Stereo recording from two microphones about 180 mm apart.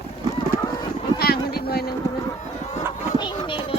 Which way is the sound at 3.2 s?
25° left (ahead or behind).